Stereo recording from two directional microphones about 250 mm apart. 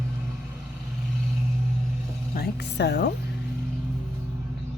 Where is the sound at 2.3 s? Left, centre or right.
Left.